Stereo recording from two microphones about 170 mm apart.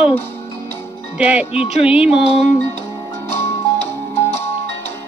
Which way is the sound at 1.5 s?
35° left (ahead or behind).